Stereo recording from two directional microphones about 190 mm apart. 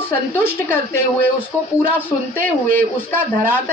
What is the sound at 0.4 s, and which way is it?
A woman's voice, 10° left (ahead or behind).